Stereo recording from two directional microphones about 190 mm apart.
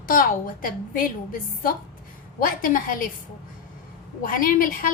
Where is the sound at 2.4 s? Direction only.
45° left (ahead or behind).